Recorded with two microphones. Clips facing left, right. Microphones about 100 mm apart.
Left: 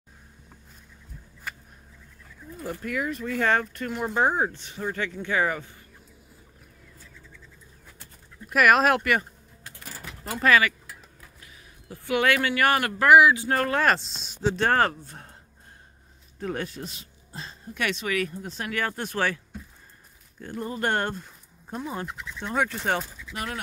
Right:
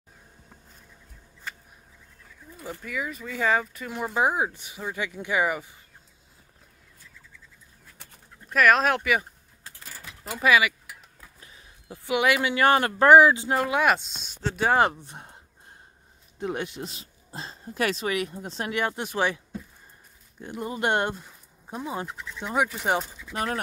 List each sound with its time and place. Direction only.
2.7 s speech: centre (ahead or behind)
8.5 s speech: 5° left (ahead or behind)
10.2 s speech: 5° right (ahead or behind); by 13.5 s 30° right (ahead or behind)
13.5 s speech: 10° right (ahead or behind)
14.5 s speech: 10° right (ahead or behind)
16.3 s speech: 20° right (ahead or behind)
23.2 s speech: 35° right (ahead or behind)